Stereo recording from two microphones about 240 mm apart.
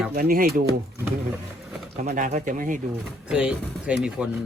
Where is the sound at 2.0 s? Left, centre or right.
Right.